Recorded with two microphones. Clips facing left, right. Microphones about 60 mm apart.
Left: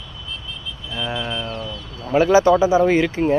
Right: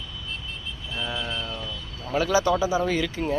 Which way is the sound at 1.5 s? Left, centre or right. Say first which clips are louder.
Left 5 dB; left.